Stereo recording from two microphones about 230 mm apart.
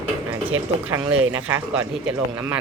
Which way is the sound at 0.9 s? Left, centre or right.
Centre.